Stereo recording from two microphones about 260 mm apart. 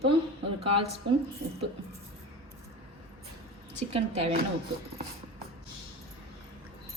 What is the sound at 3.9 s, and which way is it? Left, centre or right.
Speech, right.